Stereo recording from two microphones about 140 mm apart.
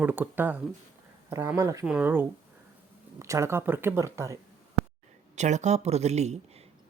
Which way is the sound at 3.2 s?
20° right (ahead or behind).